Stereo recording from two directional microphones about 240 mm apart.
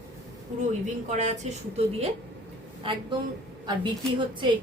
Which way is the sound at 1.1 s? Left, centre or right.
Right.